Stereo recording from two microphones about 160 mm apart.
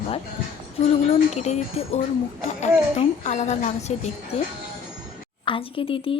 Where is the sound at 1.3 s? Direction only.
45° left (ahead or behind).